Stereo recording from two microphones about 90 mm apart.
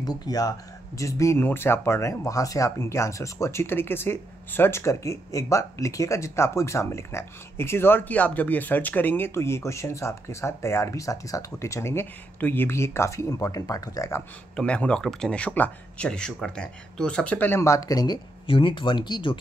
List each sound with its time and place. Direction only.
0.0 s speech: 45° left (ahead or behind)
14.5 s speech: 10° left (ahead or behind)
17.6 s speech: 35° left (ahead or behind)
18.5 s speech: 70° left (ahead or behind)